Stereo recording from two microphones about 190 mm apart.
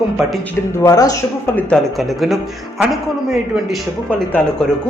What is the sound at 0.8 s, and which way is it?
Speech, 20° left (ahead or behind).